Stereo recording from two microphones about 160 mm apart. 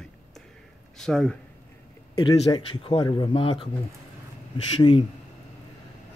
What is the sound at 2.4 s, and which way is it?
A man's voice, 30° left (ahead or behind).